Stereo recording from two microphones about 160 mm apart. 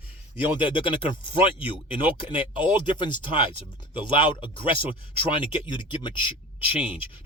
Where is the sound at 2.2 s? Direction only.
30° left (ahead or behind).